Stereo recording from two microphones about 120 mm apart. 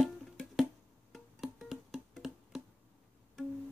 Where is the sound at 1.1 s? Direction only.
Centre (ahead or behind).